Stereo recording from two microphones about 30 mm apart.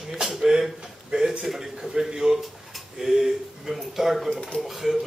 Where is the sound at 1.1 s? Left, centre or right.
Right.